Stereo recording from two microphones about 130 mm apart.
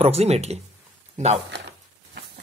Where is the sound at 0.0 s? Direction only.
50° right (ahead or behind).